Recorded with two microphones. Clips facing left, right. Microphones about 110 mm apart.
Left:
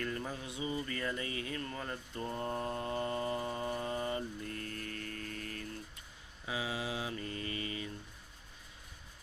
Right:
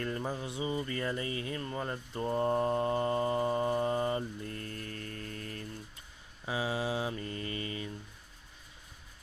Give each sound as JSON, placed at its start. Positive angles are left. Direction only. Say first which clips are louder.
{"t": 0.0, "sound": "speech", "louder": "right 4 dB", "side_deg": -30}
{"t": 6.4, "sound": "mantra", "louder": "right 5 dB", "side_deg": -35}